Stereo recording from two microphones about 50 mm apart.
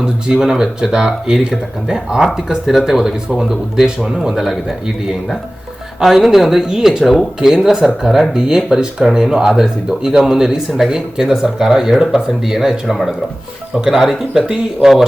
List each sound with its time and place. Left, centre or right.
0.0 s speech: centre
6.0 s speech: centre
7.0 s speech: centre
7.6 s speech: centre